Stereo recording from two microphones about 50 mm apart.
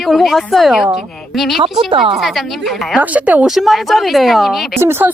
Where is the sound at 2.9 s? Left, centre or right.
Right.